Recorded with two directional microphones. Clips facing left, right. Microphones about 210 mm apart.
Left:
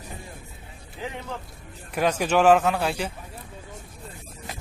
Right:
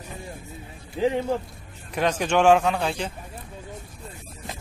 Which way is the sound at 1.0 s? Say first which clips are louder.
Right 12 dB; 30° right (ahead or behind).